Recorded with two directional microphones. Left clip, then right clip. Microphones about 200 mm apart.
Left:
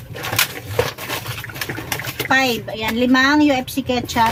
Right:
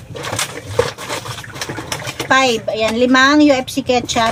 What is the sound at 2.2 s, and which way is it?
Speech, 15° left (ahead or behind).